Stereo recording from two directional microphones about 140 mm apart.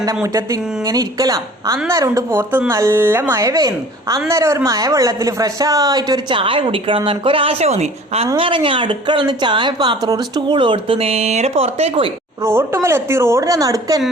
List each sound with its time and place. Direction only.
0.0 s speech: 25° right (ahead or behind)
6.4 s speech: 40° right (ahead or behind)
8.4 s speech: 40° right (ahead or behind)
12.5 s speech: 20° right (ahead or behind)